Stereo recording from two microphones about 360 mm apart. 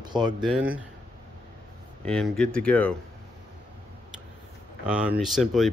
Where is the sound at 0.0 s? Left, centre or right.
Centre.